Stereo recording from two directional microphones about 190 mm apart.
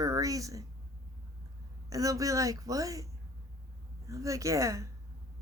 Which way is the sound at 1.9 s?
15° right (ahead or behind).